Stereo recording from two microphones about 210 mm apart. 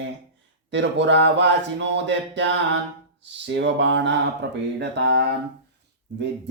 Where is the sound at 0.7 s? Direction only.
60° right (ahead or behind).